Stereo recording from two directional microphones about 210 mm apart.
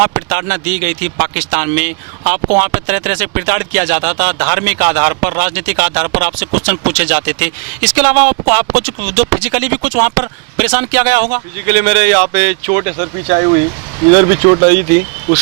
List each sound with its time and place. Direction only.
0.0 s speech: 15° right (ahead or behind)
14.6 s speech: 15° right (ahead or behind)